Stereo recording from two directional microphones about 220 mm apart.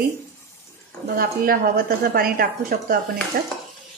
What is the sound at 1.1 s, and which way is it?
Speech, 40° right (ahead or behind).